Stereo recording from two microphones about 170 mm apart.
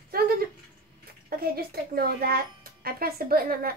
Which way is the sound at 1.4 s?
65° right (ahead or behind).